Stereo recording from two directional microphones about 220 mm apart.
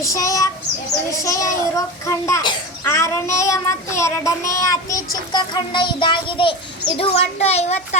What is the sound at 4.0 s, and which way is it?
Child singing, 15° left (ahead or behind).